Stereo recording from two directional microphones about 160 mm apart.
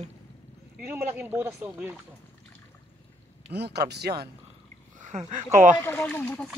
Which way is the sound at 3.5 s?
90° right.